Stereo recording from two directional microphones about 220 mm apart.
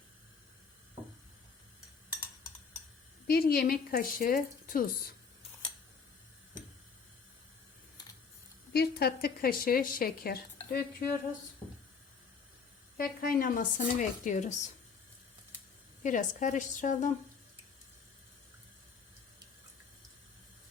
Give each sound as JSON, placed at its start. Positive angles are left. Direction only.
{"t": 3.2, "sound": "a woman's voice", "side_deg": 45}
{"t": 8.7, "sound": "a woman's voice", "side_deg": 45}
{"t": 13.0, "sound": "speech", "side_deg": 40}
{"t": 16.0, "sound": "speech", "side_deg": 35}